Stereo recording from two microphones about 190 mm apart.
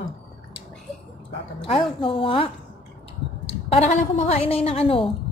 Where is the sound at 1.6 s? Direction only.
30° left (ahead or behind).